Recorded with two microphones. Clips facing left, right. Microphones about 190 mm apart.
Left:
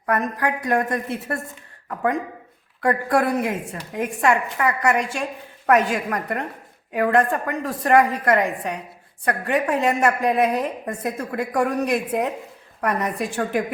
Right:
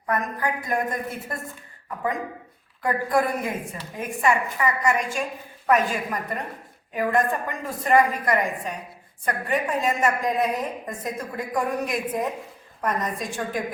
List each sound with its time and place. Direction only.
0.0 s a woman's voice: 70° left (ahead or behind)
2.8 s a woman's voice: 70° left (ahead or behind)
12.8 s a woman's voice: 65° left (ahead or behind)